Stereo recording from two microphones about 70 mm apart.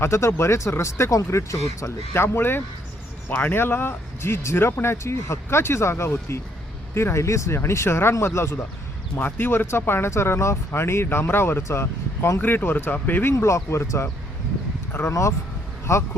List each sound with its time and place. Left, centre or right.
0.0 s speech: left
12.4 s speech: left
13.3 s speech: left